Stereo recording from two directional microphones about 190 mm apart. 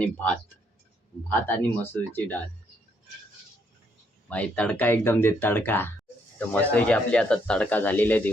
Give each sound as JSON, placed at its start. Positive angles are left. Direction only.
{"t": 0.0, "sound": "speech", "side_deg": 5}
{"t": 4.3, "sound": "speech", "side_deg": 5}